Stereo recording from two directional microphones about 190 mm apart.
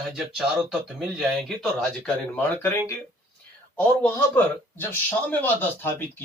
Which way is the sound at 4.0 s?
10° left (ahead or behind).